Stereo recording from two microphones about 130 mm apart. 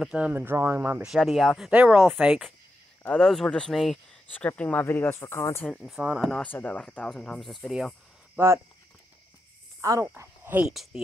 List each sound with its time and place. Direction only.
0.0 s speech: 10° right (ahead or behind)
1.1 s speech: centre (ahead or behind)
1.8 s speech: 10° right (ahead or behind)
3.0 s speech: 5° left (ahead or behind)
5.9 s speech: 10° right (ahead or behind)
6.2 s speech: 10° left (ahead or behind)
8.4 s speech: 20° right (ahead or behind)
9.8 s speech: 25° right (ahead or behind)
10.7 s speech: centre (ahead or behind)